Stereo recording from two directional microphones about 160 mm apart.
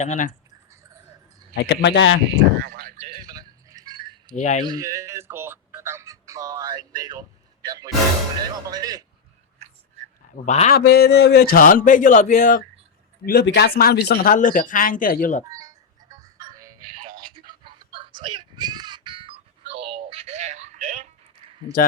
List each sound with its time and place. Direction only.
0.0 s speech: 50° left (ahead or behind)
1.5 s a man's voice: 90° left
2.2 s speech: 80° right
3.0 s a sound: 30° right (ahead or behind)
4.4 s speech: 50° left (ahead or behind)
4.6 s a man's voice: 25° right (ahead or behind)
10.4 s speech: 45° left (ahead or behind)
10.7 s speech: 85° left; by 12.6 s 55° left (ahead or behind)
13.2 s speech: 80° left; by 15.4 s 55° left (ahead or behind)
15.4 s music: 20° right (ahead or behind)
17.1 s a sound: 30° right (ahead or behind)
20.1 s music: 40° right (ahead or behind)